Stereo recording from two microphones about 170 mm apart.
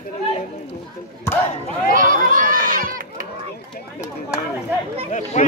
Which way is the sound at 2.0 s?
50° right (ahead or behind).